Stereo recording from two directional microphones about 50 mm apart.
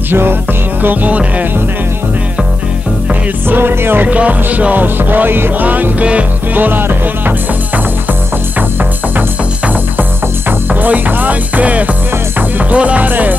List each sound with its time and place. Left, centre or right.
0.1 s music: right
0.8 s music: right
3.4 s music: right
4.1 s music: right
10.7 s music: right